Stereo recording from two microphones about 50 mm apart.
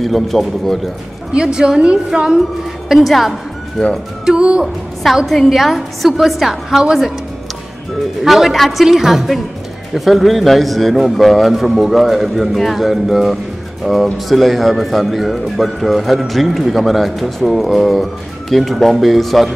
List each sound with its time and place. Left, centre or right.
0.0 s a man's voice: centre
1.3 s a woman's voice: centre
2.9 s a man's voice: centre
3.8 s speech: centre
4.3 s a woman's voice: centre
5.1 s a man's voice: centre
8.2 s a man's voice: centre